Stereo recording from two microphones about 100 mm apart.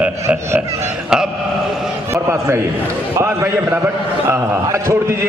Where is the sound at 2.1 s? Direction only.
30° right (ahead or behind).